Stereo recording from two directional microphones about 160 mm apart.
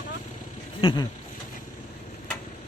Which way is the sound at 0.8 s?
30° left (ahead or behind).